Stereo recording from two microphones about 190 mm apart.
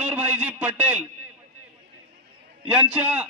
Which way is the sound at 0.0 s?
10° right (ahead or behind).